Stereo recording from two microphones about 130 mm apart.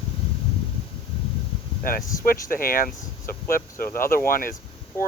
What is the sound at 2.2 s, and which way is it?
Speech, 90° left.